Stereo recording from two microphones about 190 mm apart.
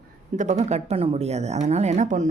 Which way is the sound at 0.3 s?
40° right (ahead or behind).